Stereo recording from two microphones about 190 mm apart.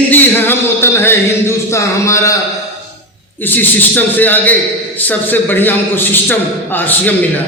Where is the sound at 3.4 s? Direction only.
10° left (ahead or behind).